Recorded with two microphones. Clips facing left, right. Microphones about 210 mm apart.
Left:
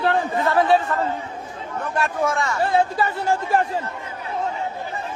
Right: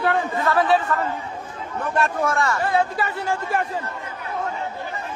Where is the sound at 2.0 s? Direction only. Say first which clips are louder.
Even; centre (ahead or behind).